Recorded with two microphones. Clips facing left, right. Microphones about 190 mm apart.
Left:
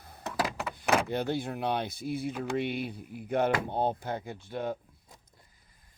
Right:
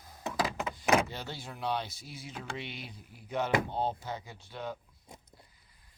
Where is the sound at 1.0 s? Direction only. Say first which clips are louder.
Left 11 dB; 55° left (ahead or behind).